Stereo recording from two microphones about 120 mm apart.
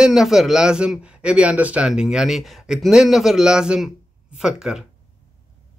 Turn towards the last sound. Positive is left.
turn(degrees=-5)  # may be behind; listen again after turning